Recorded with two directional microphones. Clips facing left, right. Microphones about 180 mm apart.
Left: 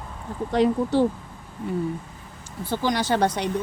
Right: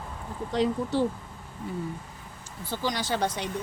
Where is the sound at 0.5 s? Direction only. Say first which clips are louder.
Left 5 dB; 60° left (ahead or behind).